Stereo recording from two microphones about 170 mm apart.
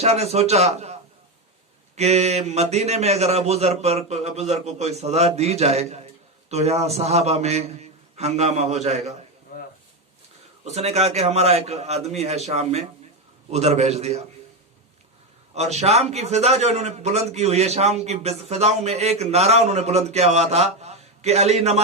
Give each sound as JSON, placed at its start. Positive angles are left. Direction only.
{"t": 0.0, "sound": "a man's voice", "side_deg": -40}
{"t": 2.0, "sound": "a man's voice", "side_deg": -40}
{"t": 9.5, "sound": "a sound", "side_deg": 65}
{"t": 10.6, "sound": "a man's voice", "side_deg": -40}
{"t": 15.5, "sound": "a man's voice", "side_deg": -40}